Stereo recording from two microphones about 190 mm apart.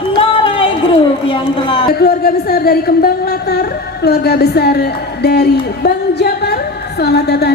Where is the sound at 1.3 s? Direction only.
25° left (ahead or behind).